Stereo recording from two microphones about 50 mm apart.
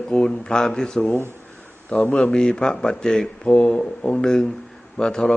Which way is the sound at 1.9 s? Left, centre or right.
Left.